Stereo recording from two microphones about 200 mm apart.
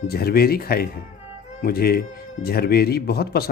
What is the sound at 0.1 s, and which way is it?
Speech, 50° left (ahead or behind).